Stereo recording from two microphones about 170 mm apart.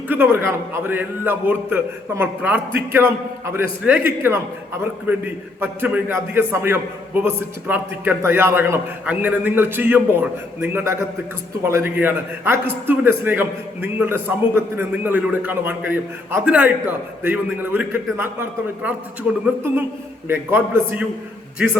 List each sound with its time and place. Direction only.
0.1 s a man's voice: 15° right (ahead or behind)
20.2 s a man's voice: 15° right (ahead or behind)